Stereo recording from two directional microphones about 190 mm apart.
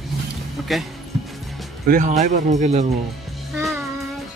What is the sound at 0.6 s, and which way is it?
Speech, centre (ahead or behind).